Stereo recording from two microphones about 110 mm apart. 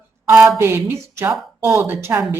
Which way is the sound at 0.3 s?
5° right (ahead or behind).